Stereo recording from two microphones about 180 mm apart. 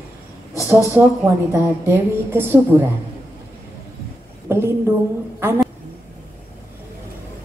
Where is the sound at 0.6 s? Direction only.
10° right (ahead or behind).